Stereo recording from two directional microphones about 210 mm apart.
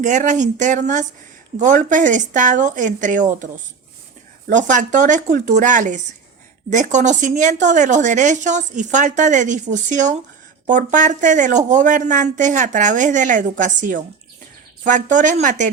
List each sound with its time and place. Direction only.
0.0 s a woman's voice: 35° right (ahead or behind)
15.1 s a woman's voice: 35° right (ahead or behind)